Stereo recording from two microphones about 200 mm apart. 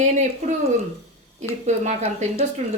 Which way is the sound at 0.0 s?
35° right (ahead or behind).